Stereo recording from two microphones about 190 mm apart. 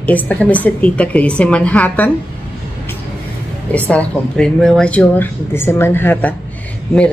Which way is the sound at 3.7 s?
5° left (ahead or behind).